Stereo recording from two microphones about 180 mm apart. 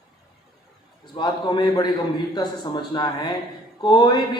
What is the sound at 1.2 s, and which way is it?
Music, 25° left (ahead or behind).